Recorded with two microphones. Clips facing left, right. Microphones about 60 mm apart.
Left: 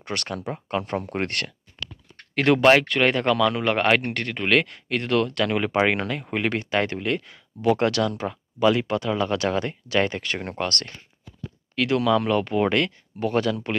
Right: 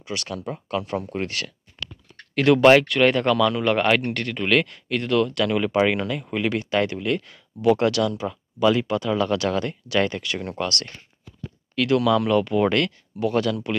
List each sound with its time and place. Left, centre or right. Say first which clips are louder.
0.0 s speech: left 1 dB; left
0.5 s speech: even; left
1.1 s speech: left 1 dB; left
2.3 s speech: right 2 dB; left
2.6 s speech: right 3 dB; centre; by 10.9 s left
11.7 s speech: right 1 dB; left